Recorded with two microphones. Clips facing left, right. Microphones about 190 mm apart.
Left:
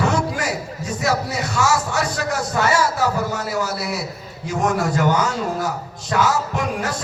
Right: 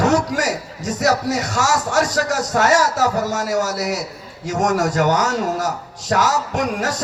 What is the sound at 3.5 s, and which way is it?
Speech, 45° right (ahead or behind).